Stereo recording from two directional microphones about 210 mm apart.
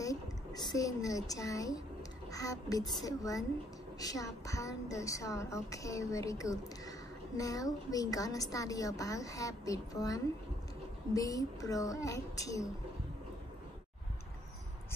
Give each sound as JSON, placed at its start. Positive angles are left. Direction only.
{"t": 0.0, "sound": "a woman's voice", "side_deg": 15}